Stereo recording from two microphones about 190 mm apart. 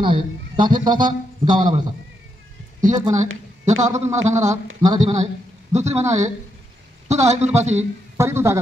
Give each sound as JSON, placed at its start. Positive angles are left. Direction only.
{"t": 0.0, "sound": "a man's voice", "side_deg": -25}
{"t": 2.8, "sound": "a man's voice", "side_deg": -40}
{"t": 4.8, "sound": "a man's voice", "side_deg": -20}
{"t": 5.7, "sound": "a man's voice", "side_deg": -35}
{"t": 6.0, "sound": "a man's voice", "side_deg": -15}
{"t": 7.3, "sound": "a man's voice", "side_deg": -35}
{"t": 8.2, "sound": "speech", "side_deg": -15}